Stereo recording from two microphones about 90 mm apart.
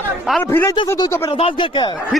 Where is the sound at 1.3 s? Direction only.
90° left.